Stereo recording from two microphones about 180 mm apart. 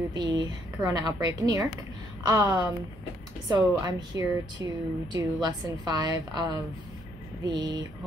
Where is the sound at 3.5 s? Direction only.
20° right (ahead or behind).